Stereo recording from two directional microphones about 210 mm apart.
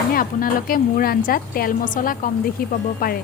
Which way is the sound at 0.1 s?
40° left (ahead or behind).